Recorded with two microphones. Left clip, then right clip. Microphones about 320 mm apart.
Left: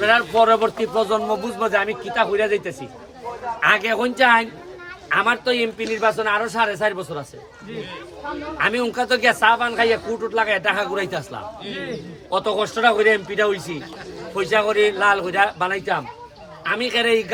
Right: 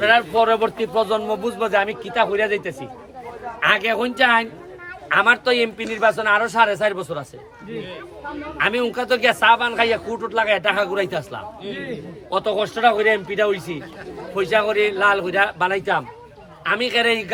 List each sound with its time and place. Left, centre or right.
0.0 s speech: centre
8.5 s speech: centre